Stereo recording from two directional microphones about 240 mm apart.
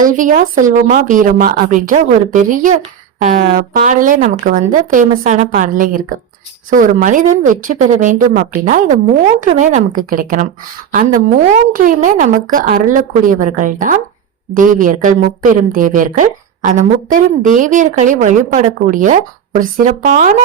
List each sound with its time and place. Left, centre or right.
0.0 s a woman's voice: right